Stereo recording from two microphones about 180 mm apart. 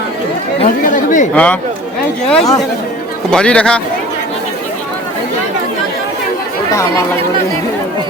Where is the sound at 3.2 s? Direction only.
5° left (ahead or behind).